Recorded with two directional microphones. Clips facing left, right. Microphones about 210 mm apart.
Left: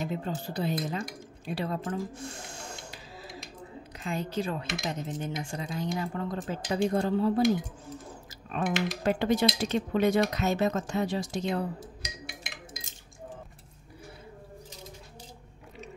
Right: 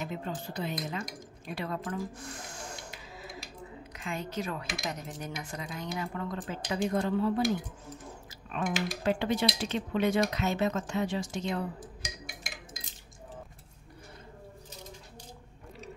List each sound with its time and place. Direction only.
0.0 s speech: 35° left (ahead or behind)
4.0 s speech: 35° left (ahead or behind)
8.5 s speech: 40° left (ahead or behind)